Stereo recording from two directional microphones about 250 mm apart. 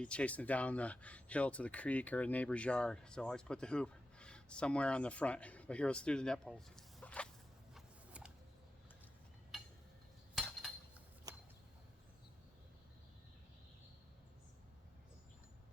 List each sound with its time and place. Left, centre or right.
0.0 s speech: centre
7.7 s a sound: centre
10.3 s cutlery: centre